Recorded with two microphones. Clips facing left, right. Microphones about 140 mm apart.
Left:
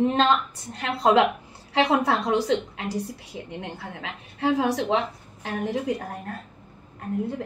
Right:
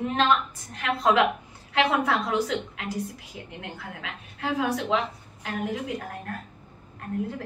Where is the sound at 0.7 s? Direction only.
30° left (ahead or behind).